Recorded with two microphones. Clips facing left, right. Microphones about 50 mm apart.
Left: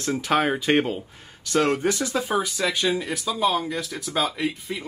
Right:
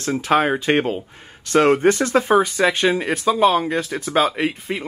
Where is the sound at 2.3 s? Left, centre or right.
Right.